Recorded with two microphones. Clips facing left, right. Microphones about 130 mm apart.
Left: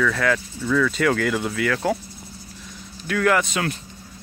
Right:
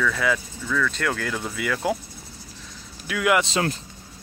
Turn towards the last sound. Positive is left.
turn(degrees=-30)  # may be behind; listen again after turning